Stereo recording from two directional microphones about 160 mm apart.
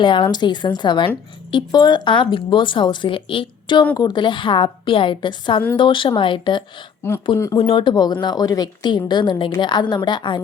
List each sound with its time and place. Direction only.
0.0 s a woman's voice: 30° left (ahead or behind)
7.3 s speech: 15° left (ahead or behind)
7.6 s a woman's voice: 35° left (ahead or behind)